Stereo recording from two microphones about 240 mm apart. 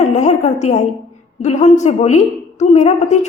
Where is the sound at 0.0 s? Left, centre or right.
Left.